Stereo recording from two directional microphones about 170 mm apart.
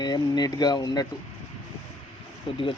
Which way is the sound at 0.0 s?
25° left (ahead or behind).